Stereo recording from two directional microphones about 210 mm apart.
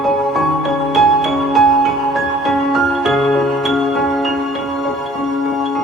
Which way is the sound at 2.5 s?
Centre (ahead or behind).